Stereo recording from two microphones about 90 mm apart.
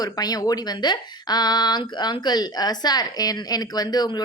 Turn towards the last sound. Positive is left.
turn(degrees=50)  # may be behind; listen again after turning